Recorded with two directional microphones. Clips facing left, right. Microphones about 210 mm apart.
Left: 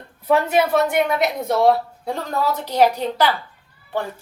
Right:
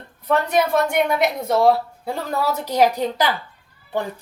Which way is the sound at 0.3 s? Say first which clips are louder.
Left 2 dB; 5° left (ahead or behind).